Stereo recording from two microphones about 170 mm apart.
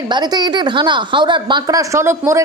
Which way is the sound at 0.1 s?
25° right (ahead or behind).